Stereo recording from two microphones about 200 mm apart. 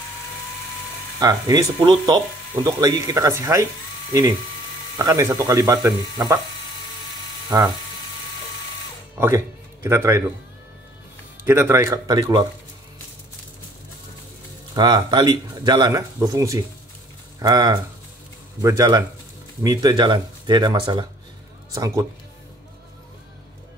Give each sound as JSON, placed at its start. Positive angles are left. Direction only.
{"t": 1.2, "sound": "speech", "side_deg": -15}
{"t": 4.9, "sound": "speech", "side_deg": -15}
{"t": 7.4, "sound": "speech", "side_deg": -15}
{"t": 9.2, "sound": "speech", "side_deg": -10}
{"t": 11.4, "sound": "speech", "side_deg": -10}
{"t": 14.8, "sound": "speech", "side_deg": -20}